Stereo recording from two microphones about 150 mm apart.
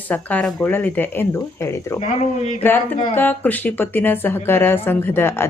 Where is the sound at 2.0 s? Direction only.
50° left (ahead or behind).